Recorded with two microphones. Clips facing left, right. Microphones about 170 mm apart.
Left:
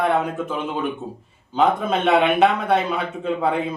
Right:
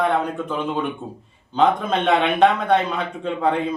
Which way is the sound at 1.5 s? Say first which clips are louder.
Right 1 dB; 5° left (ahead or behind).